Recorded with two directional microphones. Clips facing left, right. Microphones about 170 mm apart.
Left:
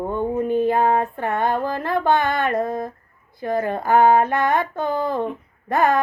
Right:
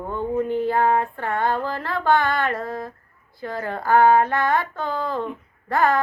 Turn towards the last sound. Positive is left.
turn(degrees=20)  # may be behind; listen again after turning